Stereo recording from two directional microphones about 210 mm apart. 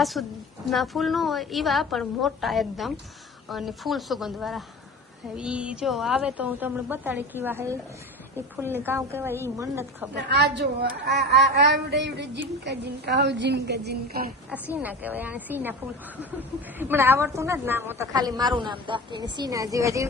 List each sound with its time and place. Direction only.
0.0 s a woman's voice: centre (ahead or behind)
10.2 s a woman's voice: 50° right (ahead or behind)
14.5 s a woman's voice: 10° right (ahead or behind)